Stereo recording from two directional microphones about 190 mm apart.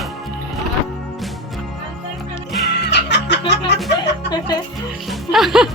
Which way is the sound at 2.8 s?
65° left (ahead or behind).